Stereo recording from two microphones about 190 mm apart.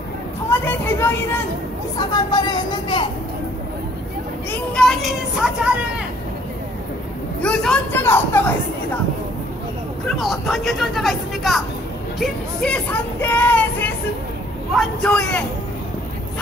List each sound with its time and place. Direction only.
0.5 s a sound: 10° left (ahead or behind)
2.0 s speech: 20° left (ahead or behind)
4.5 s speech: 5° left (ahead or behind)
7.4 s speech: 5° left (ahead or behind)
10.0 s speech: centre (ahead or behind)